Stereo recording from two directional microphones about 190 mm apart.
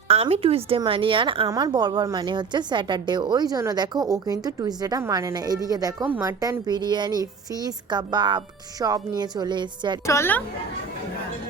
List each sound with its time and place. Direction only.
0.1 s speech: 35° right (ahead or behind)
10.1 s a woman's voice: 10° left (ahead or behind)